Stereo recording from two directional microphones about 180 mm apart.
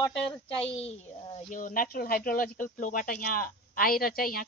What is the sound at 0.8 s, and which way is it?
Speech, 35° left (ahead or behind).